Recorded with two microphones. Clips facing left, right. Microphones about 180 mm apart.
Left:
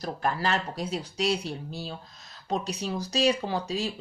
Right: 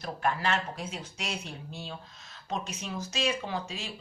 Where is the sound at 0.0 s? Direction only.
35° left (ahead or behind).